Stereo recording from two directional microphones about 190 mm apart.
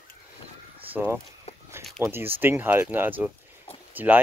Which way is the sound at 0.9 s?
10° right (ahead or behind).